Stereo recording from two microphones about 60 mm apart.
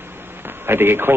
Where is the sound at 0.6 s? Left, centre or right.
Right.